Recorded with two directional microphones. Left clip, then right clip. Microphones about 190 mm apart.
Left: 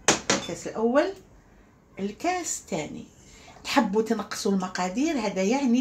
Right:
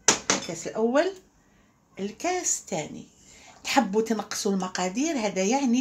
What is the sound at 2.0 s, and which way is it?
Speech, 30° right (ahead or behind).